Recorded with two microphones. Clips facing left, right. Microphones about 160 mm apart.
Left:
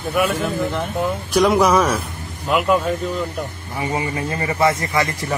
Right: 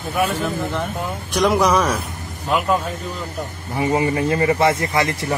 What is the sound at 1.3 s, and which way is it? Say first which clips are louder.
Speech: left 2 dB; centre (ahead or behind).